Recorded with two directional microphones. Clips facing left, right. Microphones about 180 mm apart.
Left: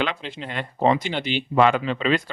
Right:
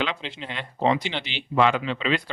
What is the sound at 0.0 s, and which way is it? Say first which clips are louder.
Speech: left 2 dB; 50° left (ahead or behind).